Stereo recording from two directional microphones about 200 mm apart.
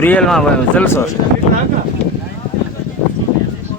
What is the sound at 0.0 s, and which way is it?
Speech, 5° left (ahead or behind).